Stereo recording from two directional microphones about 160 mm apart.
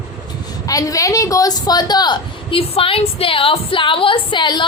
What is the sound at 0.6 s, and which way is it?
A woman's voice, 20° left (ahead or behind).